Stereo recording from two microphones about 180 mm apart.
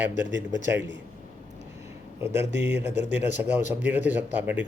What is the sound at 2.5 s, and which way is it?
Speech, 75° right (ahead or behind).